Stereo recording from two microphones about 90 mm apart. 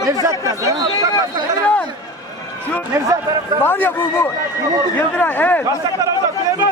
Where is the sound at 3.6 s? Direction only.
25° left (ahead or behind).